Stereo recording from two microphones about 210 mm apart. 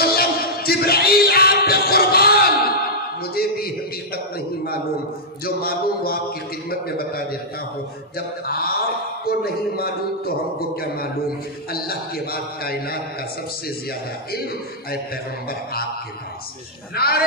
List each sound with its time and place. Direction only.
0.0 s a sound: 45° left (ahead or behind)
5.4 s a man's voice: 45° left (ahead or behind)
8.5 s a man's voice: 45° left (ahead or behind)
11.7 s a man's voice: 45° left (ahead or behind)
16.9 s a man's voice: 45° left (ahead or behind)